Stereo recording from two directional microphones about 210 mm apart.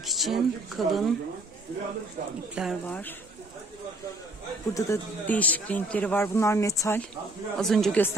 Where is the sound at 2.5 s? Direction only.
Centre (ahead or behind).